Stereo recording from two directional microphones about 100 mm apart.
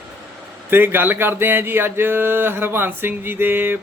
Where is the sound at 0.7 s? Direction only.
20° right (ahead or behind).